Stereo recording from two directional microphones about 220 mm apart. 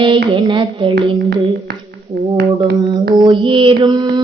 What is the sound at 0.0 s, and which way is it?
Music, 20° right (ahead or behind).